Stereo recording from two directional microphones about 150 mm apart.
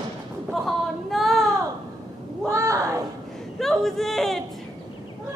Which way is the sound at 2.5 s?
20° right (ahead or behind).